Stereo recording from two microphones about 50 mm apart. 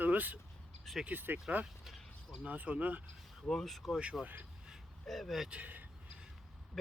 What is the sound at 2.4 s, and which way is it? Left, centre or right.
Speech, right.